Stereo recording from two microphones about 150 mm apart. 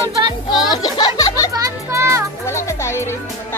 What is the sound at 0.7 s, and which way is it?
Music, 30° left (ahead or behind).